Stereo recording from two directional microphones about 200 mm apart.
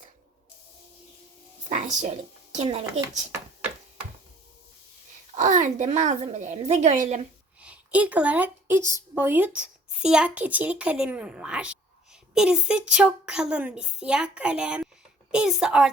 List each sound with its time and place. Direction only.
1.7 s a woman's voice: 40° right (ahead or behind)
5.4 s a woman's voice: 40° right (ahead or behind)
7.6 s a woman's voice: 5° right (ahead or behind)